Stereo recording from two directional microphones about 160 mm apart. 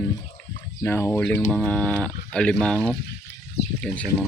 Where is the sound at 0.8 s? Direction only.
15° left (ahead or behind).